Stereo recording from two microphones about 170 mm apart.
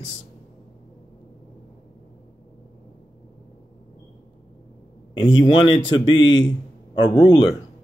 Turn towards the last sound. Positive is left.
turn(degrees=30)  # may be behind; listen again after turning